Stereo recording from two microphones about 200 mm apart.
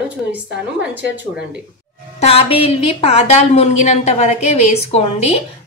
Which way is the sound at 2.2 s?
30° left (ahead or behind).